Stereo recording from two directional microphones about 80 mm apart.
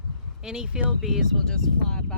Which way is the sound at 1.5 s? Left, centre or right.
Centre.